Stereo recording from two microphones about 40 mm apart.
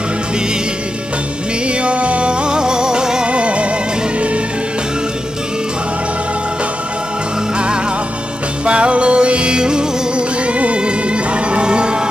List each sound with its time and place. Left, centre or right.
1.7 s music: right
3.3 s music: right
7.5 s music: right